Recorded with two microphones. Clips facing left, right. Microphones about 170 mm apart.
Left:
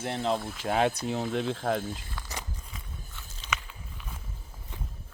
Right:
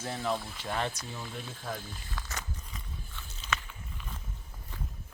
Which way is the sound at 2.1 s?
10° left (ahead or behind).